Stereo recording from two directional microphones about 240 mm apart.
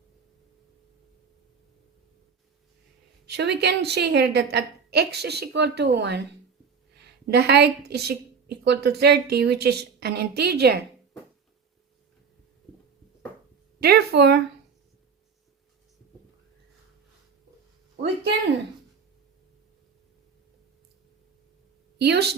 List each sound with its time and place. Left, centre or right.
3.2 s a woman's voice: right
7.3 s a woman's voice: right
13.7 s a woman's voice: right
21.9 s a woman's voice: right